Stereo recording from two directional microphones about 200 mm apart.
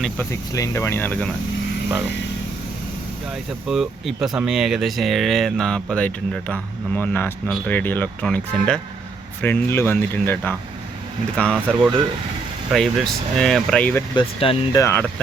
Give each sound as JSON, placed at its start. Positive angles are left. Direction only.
{"t": 0.0, "sound": "speech", "side_deg": 10}
{"t": 3.7, "sound": "speech", "side_deg": 0}
{"t": 12.7, "sound": "speech", "side_deg": 0}
{"t": 14.2, "sound": "speech", "side_deg": 25}
{"t": 14.8, "sound": "speech", "side_deg": 10}